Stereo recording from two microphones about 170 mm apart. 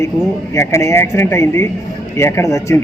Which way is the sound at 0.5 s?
15° left (ahead or behind).